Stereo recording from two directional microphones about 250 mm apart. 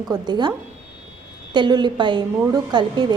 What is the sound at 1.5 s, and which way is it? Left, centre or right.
A woman's voice, centre.